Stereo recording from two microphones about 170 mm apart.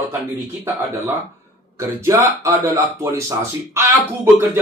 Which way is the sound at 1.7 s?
15° right (ahead or behind).